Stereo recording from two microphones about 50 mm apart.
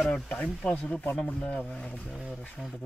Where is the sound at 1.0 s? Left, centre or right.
Left.